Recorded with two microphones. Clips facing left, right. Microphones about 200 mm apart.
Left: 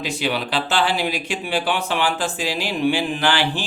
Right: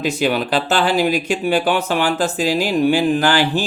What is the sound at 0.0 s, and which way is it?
Speech, 45° right (ahead or behind).